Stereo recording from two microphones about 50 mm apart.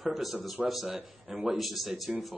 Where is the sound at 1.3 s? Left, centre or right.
Centre.